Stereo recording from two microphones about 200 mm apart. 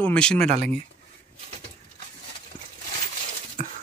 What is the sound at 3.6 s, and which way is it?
Dog, 40° right (ahead or behind).